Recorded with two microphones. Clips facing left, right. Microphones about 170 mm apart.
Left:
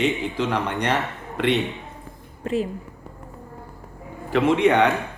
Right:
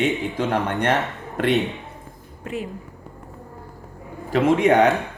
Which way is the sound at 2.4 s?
35° left (ahead or behind).